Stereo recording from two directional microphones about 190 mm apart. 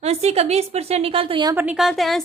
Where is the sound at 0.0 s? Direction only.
35° right (ahead or behind).